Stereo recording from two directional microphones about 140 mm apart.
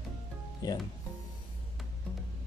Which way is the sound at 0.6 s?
25° left (ahead or behind).